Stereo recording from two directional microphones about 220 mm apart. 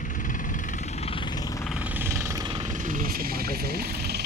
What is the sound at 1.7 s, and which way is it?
Vehicle, 5° right (ahead or behind).